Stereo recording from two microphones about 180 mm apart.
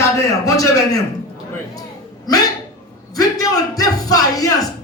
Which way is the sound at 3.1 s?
20° left (ahead or behind).